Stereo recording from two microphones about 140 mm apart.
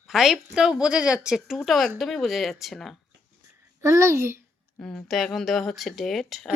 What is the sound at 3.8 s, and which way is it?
Speech, 20° right (ahead or behind).